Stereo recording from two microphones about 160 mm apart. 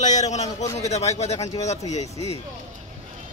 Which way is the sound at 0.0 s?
45° left (ahead or behind).